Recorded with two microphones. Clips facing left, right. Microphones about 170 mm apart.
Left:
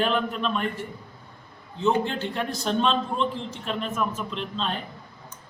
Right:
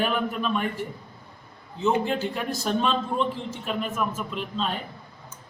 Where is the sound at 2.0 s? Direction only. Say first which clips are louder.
Right 1 dB; 5° right (ahead or behind).